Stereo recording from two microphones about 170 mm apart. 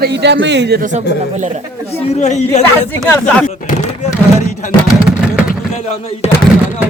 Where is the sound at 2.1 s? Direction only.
45° left (ahead or behind).